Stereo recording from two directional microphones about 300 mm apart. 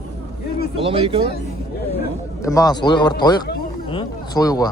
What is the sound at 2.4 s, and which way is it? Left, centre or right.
A man's voice, centre.